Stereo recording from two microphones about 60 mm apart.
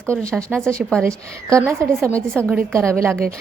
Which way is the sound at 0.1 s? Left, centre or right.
Centre.